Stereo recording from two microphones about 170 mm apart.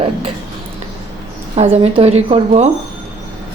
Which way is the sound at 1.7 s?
35° right (ahead or behind).